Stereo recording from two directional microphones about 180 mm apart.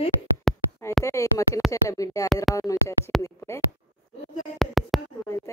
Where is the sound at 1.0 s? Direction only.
15° left (ahead or behind).